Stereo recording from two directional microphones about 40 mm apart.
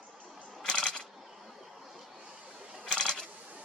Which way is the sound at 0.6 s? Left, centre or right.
Left.